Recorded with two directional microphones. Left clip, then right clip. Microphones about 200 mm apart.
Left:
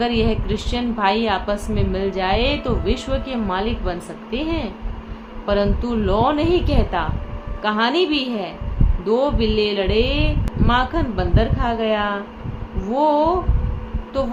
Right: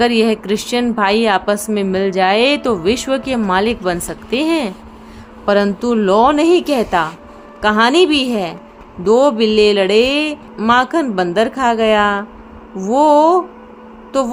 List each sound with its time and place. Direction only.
0.0 s a woman's voice: 60° right (ahead or behind)